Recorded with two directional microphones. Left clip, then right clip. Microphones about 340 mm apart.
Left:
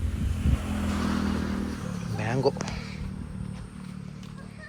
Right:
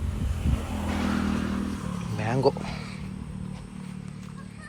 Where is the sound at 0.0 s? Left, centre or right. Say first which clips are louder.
Even; centre.